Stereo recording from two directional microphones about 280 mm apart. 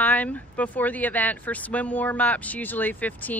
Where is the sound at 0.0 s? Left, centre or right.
Centre.